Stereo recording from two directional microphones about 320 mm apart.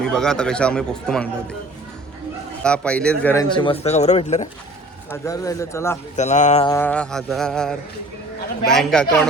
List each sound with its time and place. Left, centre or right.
0.0 s speech: centre
2.6 s speech: centre; by 4.4 s left
5.1 s speech: centre
6.1 s speech: left
6.7 s speech: centre